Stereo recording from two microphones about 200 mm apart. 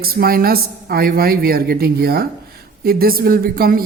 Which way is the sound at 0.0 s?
50° right (ahead or behind).